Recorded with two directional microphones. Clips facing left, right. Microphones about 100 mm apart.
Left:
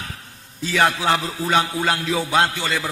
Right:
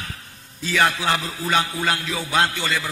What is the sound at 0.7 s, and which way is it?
Music, 25° left (ahead or behind).